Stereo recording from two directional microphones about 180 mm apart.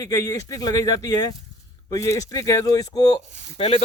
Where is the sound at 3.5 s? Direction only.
30° left (ahead or behind).